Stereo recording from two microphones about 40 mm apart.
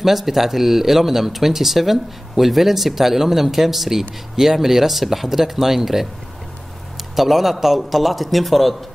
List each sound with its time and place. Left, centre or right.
0.0 s speech: centre
7.2 s speech: centre